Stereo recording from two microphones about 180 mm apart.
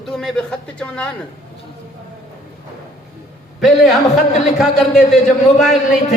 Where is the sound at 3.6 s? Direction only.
Centre (ahead or behind).